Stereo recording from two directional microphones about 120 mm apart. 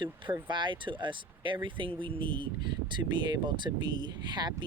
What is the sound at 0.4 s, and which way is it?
Speech, 40° right (ahead or behind).